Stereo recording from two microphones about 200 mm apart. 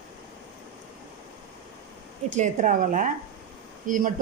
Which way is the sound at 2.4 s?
40° right (ahead or behind).